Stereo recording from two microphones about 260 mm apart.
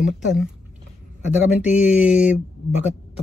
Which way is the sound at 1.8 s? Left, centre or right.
Centre.